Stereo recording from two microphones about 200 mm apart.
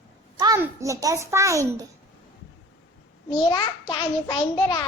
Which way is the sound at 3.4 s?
20° left (ahead or behind).